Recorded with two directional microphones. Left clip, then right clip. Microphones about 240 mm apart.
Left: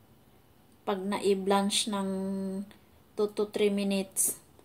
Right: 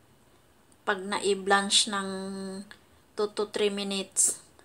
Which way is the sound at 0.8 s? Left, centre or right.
Left.